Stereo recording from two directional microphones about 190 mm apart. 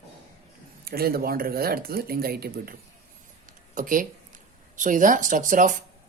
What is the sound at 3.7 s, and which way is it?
A man's voice, 45° right (ahead or behind).